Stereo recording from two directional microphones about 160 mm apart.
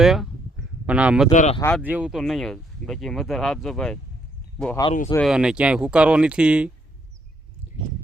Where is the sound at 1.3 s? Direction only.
50° left (ahead or behind).